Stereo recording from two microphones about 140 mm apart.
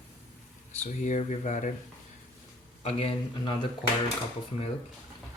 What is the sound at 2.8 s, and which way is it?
Speech, 45° left (ahead or behind).